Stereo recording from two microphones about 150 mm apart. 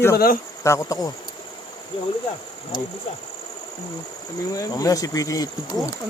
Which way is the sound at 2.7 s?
30° left (ahead or behind).